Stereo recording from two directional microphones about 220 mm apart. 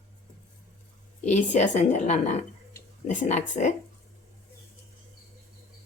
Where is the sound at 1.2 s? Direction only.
30° left (ahead or behind).